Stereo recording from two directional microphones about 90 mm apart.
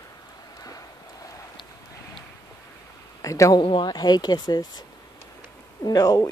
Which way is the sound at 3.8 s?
50° left (ahead or behind).